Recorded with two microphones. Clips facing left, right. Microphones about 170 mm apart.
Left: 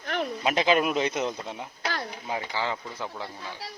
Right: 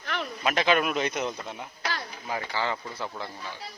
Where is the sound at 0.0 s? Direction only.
45° left (ahead or behind).